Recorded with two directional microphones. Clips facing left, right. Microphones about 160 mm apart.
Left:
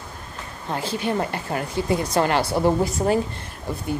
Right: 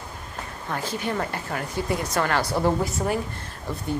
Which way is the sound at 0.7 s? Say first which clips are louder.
Left 3 dB; 25° left (ahead or behind).